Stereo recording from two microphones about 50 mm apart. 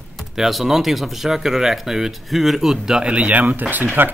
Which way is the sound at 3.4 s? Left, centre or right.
Right.